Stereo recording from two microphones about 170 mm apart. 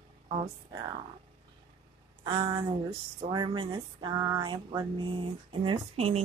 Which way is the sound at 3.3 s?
25° right (ahead or behind).